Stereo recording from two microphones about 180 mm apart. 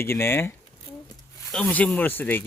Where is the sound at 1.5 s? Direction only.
5° left (ahead or behind).